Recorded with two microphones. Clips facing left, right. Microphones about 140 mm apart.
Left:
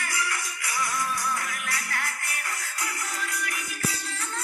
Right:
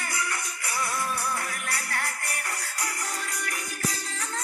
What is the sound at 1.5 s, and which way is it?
Music, 40° right (ahead or behind).